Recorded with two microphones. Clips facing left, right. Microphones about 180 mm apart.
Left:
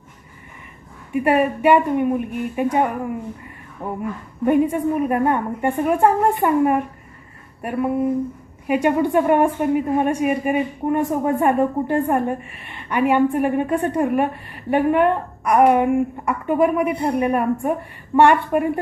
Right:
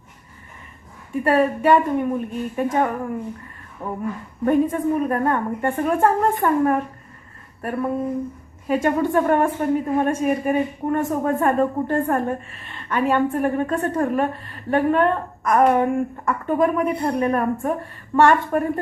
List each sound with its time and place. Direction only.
1.1 s a woman's voice: 15° left (ahead or behind)
3.8 s a sound: 20° left (ahead or behind)
4.4 s a woman's voice: 10° left (ahead or behind)